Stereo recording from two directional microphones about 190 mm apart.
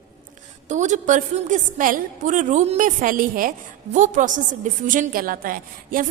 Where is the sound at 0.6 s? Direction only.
40° right (ahead or behind).